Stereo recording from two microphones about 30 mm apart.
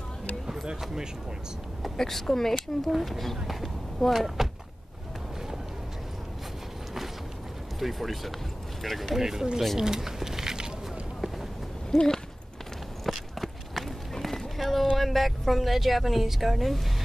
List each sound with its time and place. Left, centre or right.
2.0 s speech: centre
2.9 s speech: centre
7.8 s speech: centre
9.2 s speech: centre
9.8 s a sound: centre
11.9 s speech: centre
13.0 s run: centre
14.6 s boat: centre
15.0 s speech: centre